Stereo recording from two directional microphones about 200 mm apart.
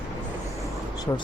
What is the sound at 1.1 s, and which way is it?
Speech, 15° left (ahead or behind).